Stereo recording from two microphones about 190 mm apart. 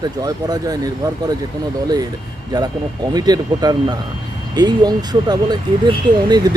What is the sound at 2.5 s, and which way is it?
Speech, 20° right (ahead or behind).